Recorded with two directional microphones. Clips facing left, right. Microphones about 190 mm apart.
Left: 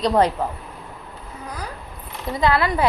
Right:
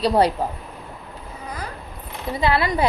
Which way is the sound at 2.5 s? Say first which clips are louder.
Right 2 dB; 25° right (ahead or behind).